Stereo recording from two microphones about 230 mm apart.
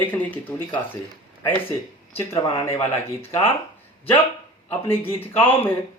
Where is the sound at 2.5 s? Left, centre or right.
Left.